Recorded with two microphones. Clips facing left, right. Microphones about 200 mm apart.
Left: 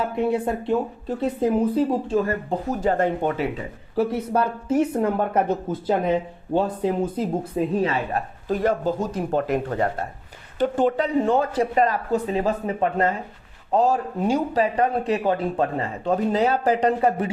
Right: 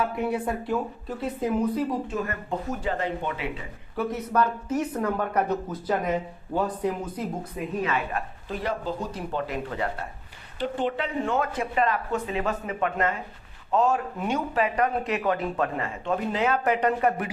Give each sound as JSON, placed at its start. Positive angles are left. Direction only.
{"t": 0.0, "sound": "speech", "side_deg": 25}
{"t": 2.9, "sound": "speech", "side_deg": 45}
{"t": 3.9, "sound": "speech", "side_deg": 30}